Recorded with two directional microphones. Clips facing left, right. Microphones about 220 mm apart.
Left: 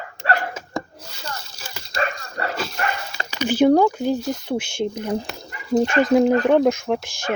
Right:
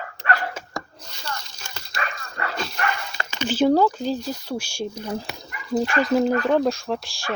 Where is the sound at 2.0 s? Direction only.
35° left (ahead or behind).